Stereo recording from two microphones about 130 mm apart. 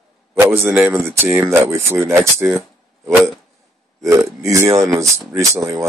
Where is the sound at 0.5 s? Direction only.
15° right (ahead or behind).